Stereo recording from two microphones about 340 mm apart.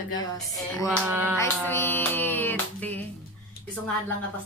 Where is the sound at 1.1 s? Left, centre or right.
Centre.